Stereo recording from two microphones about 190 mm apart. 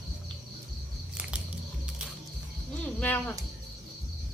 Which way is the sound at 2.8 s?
10° left (ahead or behind).